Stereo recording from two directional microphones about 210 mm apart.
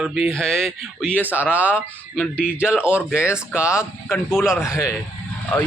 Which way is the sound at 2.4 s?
5° right (ahead or behind).